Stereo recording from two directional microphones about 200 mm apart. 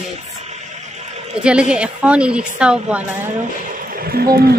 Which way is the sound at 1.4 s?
5° right (ahead or behind).